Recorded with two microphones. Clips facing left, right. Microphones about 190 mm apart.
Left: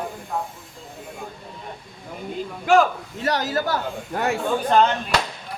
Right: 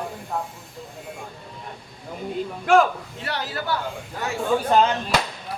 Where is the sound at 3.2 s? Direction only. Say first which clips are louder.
Left 7 dB; 40° left (ahead or behind).